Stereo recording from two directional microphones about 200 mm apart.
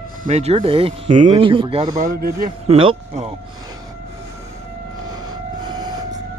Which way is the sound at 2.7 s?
30° right (ahead or behind).